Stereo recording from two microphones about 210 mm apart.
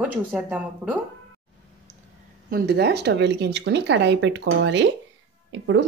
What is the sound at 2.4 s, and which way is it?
A woman's voice, 45° right (ahead or behind).